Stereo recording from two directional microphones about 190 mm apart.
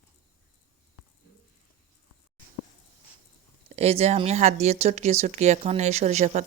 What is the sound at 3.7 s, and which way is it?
Speech, 35° right (ahead or behind).